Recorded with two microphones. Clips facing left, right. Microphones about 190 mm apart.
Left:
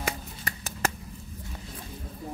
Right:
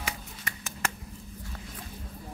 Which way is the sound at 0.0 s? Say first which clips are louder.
Left 5 dB; 35° left (ahead or behind).